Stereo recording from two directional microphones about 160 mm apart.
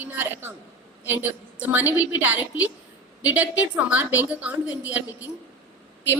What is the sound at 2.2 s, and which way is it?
A woman's voice, 10° right (ahead or behind).